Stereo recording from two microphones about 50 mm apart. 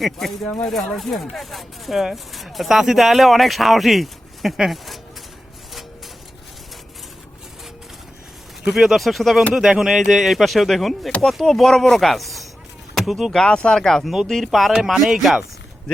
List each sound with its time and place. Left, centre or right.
0.0 s speech: centre
0.4 s speech: left
0.9 s speech: centre
8.7 s speech: centre
12.9 s chop: centre
13.3 s speech: centre